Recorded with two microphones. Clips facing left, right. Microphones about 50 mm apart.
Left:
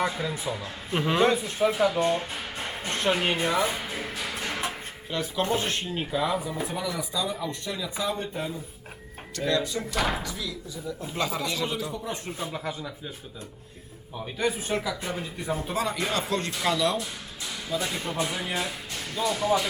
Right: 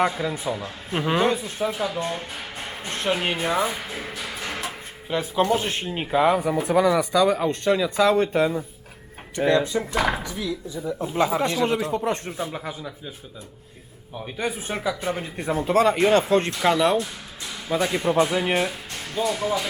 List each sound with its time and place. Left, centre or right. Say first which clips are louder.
0.1 s a man's voice: right 4 dB; centre
1.5 s speech: left 2 dB; left
2.6 s speech: right 1 dB; centre
4.3 s music: right 1 dB; centre
5.0 s speech: right 6 dB; centre
6.1 s speech: right 9 dB; right
9.4 s speech: right 6 dB; right
11.1 s a man's voice: right 8 dB; centre
11.6 s speech: right 8 dB; right
12.5 s a man's voice: right 1 dB; centre
14.3 s speech: left 1 dB; right
15.1 s speech: right 4 dB; right
17.7 s speech: right 9 dB; right
19.3 s a man's voice: left 2 dB; centre